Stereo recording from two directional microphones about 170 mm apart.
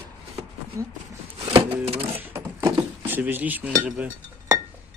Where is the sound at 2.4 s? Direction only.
25° right (ahead or behind).